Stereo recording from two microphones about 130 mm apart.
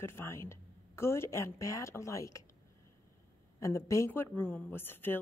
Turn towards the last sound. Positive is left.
turn(degrees=15)  # may be behind; listen again after turning